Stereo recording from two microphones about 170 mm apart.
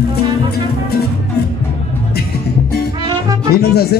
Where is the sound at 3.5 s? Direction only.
70° left (ahead or behind).